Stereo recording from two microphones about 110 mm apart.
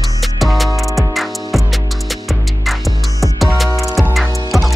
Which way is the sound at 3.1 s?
30° left (ahead or behind).